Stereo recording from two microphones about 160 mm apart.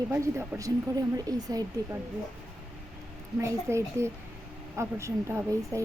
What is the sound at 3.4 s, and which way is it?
A woman's voice, 20° right (ahead or behind).